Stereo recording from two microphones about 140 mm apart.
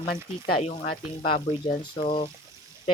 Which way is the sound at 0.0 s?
90° left.